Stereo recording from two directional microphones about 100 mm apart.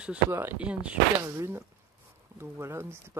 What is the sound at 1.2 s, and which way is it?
Speech, 25° right (ahead or behind).